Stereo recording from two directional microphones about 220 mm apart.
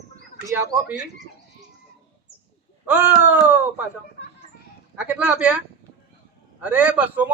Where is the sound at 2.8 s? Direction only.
5° right (ahead or behind).